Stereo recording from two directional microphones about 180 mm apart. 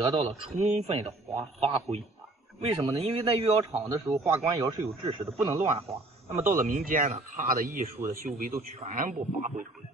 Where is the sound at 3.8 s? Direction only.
15° right (ahead or behind).